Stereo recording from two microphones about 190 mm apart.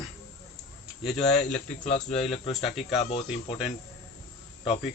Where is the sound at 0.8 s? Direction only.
Centre (ahead or behind).